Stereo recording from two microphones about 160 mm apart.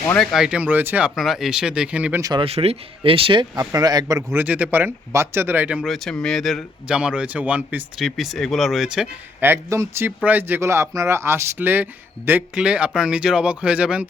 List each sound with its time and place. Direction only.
0.1 s speech: 5° left (ahead or behind)
2.4 s speech: 40° right (ahead or behind); by 9.0 s centre (ahead or behind)
9.4 s speech: 15° right (ahead or behind)